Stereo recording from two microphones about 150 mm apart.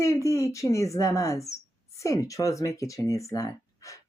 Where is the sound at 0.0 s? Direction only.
20° left (ahead or behind).